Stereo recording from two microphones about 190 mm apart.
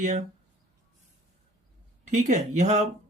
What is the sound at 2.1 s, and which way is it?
Speech, 40° right (ahead or behind).